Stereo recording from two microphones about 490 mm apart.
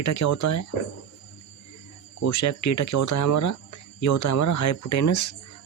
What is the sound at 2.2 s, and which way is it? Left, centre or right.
Speech, left.